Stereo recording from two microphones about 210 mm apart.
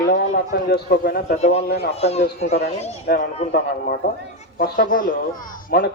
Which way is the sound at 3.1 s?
50° left (ahead or behind).